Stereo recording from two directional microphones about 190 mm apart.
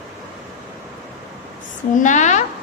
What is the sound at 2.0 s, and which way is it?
Speech, 40° left (ahead or behind).